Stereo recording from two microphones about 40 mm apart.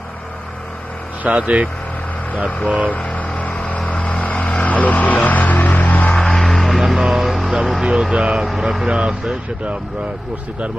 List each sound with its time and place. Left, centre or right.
1.2 s speech: right
2.6 s speech: right
3.0 s vehicle: left
4.6 s music: left
6.1 s music: centre
7.8 s vehicle: right
8.1 s speech: right